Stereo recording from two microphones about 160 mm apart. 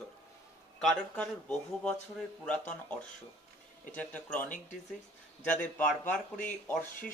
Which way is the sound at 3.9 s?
10° left (ahead or behind).